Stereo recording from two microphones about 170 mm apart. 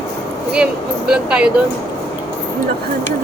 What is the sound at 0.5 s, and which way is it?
Speech, 5° right (ahead or behind).